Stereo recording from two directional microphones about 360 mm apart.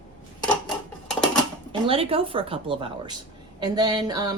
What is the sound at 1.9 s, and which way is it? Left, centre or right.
A child's voice, centre.